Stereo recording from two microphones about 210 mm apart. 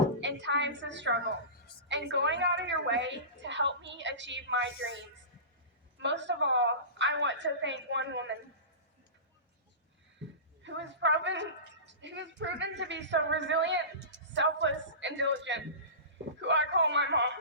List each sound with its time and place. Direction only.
0.2 s a woman's voice: 55° right (ahead or behind)
6.0 s a woman's voice: 60° right (ahead or behind)
10.6 s a woman's voice: 60° right (ahead or behind)